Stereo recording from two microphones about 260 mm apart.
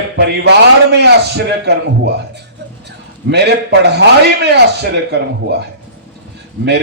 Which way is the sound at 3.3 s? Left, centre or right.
Right.